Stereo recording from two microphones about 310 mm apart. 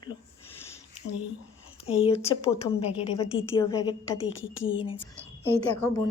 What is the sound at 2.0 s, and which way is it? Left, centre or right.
A woman's voice, centre.